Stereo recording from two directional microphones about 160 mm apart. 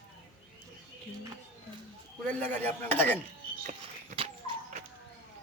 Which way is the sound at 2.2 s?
10° left (ahead or behind).